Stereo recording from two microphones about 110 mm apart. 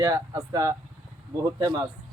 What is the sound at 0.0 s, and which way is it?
Speech, 30° right (ahead or behind).